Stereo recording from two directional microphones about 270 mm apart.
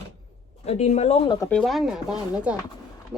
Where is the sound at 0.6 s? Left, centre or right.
Left.